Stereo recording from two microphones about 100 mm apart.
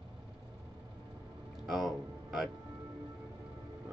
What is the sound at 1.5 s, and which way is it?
Music, 5° right (ahead or behind).